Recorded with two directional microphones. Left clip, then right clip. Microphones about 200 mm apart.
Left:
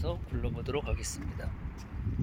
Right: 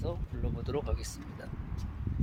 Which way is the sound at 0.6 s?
20° left (ahead or behind).